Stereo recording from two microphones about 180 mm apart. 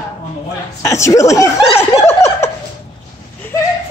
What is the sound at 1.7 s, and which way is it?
Snicker, 15° left (ahead or behind).